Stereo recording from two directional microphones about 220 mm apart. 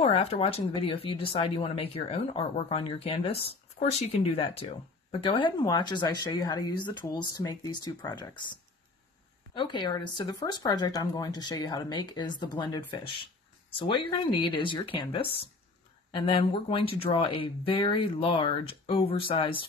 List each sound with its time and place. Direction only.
0.0 s speech: 25° left (ahead or behind)